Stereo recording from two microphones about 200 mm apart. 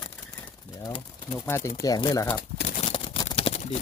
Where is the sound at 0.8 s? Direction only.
20° left (ahead or behind).